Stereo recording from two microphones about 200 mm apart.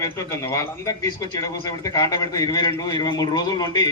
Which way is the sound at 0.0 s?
15° left (ahead or behind).